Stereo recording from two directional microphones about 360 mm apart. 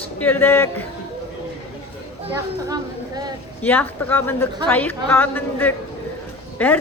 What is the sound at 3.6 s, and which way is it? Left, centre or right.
A woman's voice, centre.